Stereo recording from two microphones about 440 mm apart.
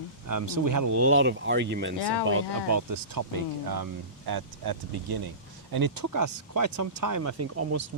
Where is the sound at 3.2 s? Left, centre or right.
Right.